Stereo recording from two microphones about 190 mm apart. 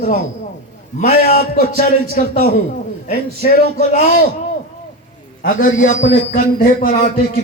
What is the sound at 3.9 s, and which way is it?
Speech, 45° left (ahead or behind).